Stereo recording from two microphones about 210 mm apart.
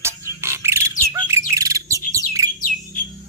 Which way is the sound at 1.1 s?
15° right (ahead or behind).